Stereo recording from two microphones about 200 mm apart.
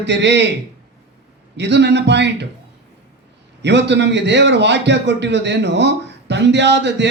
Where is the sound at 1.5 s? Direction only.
60° right (ahead or behind).